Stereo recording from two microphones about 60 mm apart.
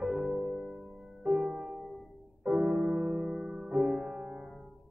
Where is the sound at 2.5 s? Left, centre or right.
Centre.